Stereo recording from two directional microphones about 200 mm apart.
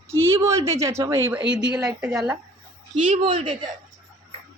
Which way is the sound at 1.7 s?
5° right (ahead or behind).